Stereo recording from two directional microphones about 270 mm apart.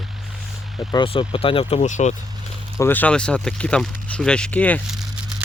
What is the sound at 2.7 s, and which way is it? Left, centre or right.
Speech, centre.